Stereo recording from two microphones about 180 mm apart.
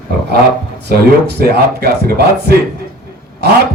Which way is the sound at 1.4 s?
60° right (ahead or behind).